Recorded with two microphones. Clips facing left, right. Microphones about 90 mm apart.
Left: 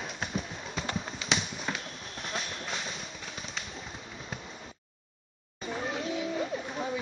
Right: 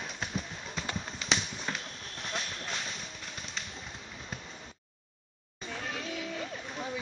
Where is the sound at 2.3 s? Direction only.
Centre (ahead or behind).